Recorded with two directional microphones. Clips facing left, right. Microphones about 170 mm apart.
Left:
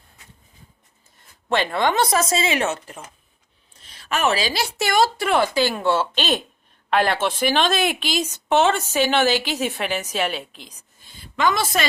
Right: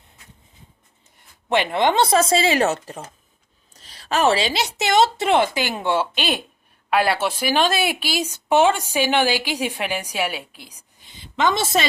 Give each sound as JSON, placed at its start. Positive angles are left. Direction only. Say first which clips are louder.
{"t": 1.5, "sound": "a woman's voice", "louder": "right 2 dB", "side_deg": -15}
{"t": 11.2, "sound": "a woman's voice", "louder": "even", "side_deg": -25}